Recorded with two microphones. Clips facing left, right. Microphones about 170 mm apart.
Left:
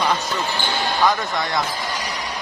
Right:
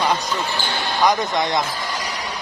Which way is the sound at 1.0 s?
20° right (ahead or behind).